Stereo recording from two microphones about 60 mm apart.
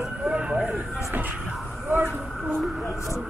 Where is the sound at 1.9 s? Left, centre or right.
Right.